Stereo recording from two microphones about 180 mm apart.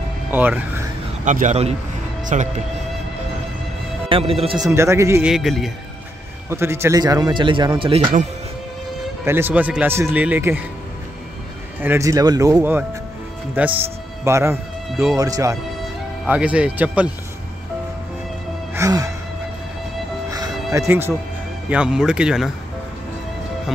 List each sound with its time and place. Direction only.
0.3 s speech: 10° right (ahead or behind)
1.2 s a man's voice: 45° right (ahead or behind)
4.1 s a man's voice: 30° right (ahead or behind)
4.6 s speech: 15° right (ahead or behind)
5.2 s speech: centre (ahead or behind)
6.5 s speech: 15° right (ahead or behind)
9.2 s speech: 10° right (ahead or behind)
11.8 s speech: 15° right (ahead or behind)
16.3 s speech: 5° right (ahead or behind)
18.8 s music: 20° right (ahead or behind)
20.2 s music: 20° right (ahead or behind)
20.7 s speech: 15° right (ahead or behind)